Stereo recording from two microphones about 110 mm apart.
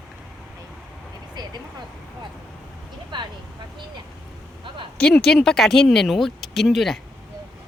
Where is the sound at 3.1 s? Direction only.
45° right (ahead or behind).